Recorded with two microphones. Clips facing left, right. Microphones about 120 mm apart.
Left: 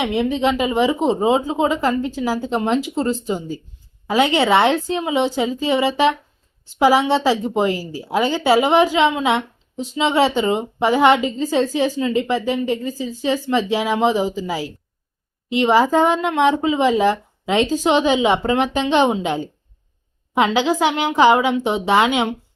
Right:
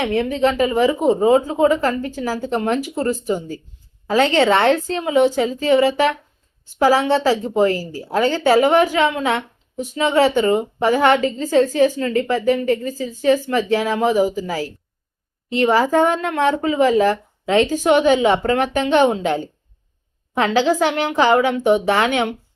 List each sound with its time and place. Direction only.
0.0 s speech: 15° left (ahead or behind)